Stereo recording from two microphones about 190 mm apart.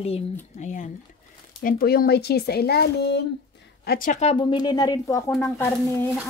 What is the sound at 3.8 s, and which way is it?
Speech, 45° left (ahead or behind).